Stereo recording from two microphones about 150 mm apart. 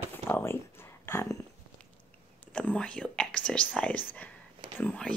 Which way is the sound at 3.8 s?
10° left (ahead or behind).